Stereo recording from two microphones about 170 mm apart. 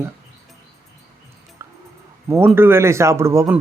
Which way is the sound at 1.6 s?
15° right (ahead or behind).